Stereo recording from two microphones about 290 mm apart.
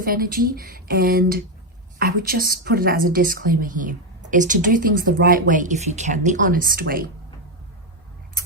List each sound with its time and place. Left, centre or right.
0.0 s a woman's voice: right